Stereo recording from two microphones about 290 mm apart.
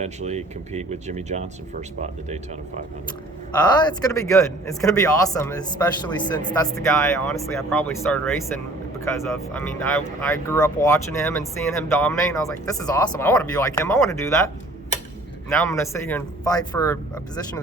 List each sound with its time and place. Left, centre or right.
0.0 s speech: right
3.8 s speech: centre